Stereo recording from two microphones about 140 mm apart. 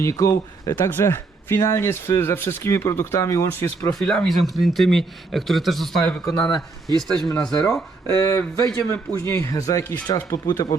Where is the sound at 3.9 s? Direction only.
5° left (ahead or behind).